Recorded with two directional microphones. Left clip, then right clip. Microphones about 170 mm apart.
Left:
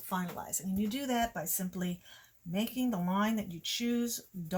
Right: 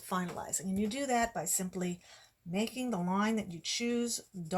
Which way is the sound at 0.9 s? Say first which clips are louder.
Right 2 dB; 25° right (ahead or behind).